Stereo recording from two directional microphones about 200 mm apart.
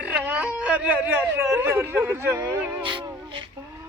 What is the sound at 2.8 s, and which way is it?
Music, 25° right (ahead or behind).